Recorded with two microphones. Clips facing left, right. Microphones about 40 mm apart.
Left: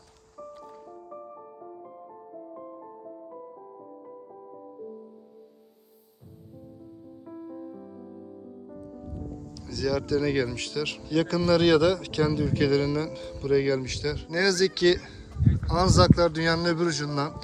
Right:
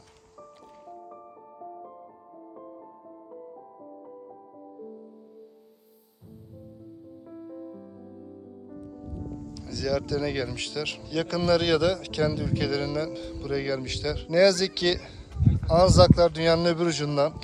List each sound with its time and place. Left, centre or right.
7.3 s music: centre
9.6 s a man's voice: centre
13.7 s a man's voice: centre
16.4 s speech: centre
16.8 s a man's voice: right